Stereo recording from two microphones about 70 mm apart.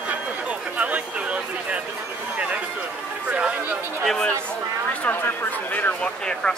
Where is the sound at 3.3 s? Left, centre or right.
Centre.